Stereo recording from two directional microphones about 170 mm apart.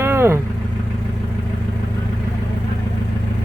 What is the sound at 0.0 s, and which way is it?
Vehicle, 15° right (ahead or behind).